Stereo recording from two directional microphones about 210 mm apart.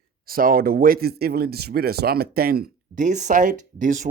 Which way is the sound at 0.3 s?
45° right (ahead or behind).